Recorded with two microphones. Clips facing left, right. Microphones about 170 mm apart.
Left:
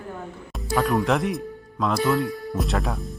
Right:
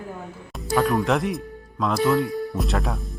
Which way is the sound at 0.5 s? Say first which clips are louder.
Right 1 dB; centre (ahead or behind).